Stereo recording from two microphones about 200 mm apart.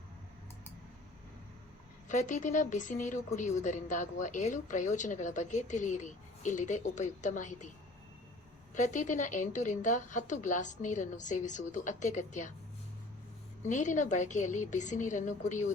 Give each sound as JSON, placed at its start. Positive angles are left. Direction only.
{"t": 2.0, "sound": "a woman's voice", "side_deg": 40}
{"t": 8.7, "sound": "a woman's voice", "side_deg": 40}
{"t": 13.6, "sound": "a woman's voice", "side_deg": 40}